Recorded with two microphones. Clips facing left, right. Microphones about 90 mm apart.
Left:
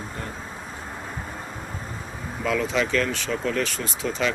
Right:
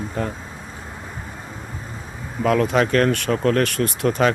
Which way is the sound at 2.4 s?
55° right (ahead or behind).